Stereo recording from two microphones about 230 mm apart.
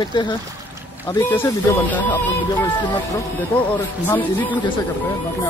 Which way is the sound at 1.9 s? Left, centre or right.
Centre.